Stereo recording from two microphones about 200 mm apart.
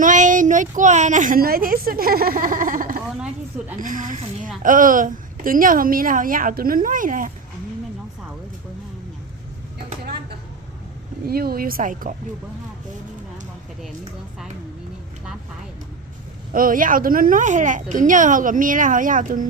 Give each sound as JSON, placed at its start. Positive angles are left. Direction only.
{"t": 0.0, "sound": "a woman's voice", "side_deg": -40}
{"t": 11.3, "sound": "a woman's voice", "side_deg": -50}
{"t": 16.5, "sound": "speech", "side_deg": -45}